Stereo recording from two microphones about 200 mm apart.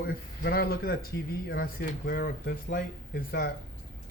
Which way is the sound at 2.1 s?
45° left (ahead or behind).